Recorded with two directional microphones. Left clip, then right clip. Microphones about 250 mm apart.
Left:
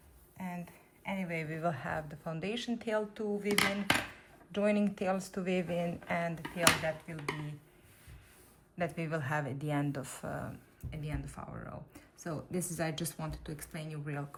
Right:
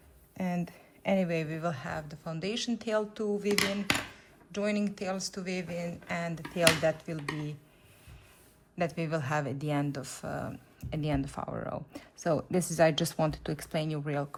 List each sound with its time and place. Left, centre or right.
0.3 s speech: centre
8.8 s speech: centre
10.9 s speech: centre